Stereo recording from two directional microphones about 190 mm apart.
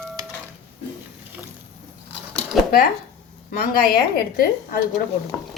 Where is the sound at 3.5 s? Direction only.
50° left (ahead or behind).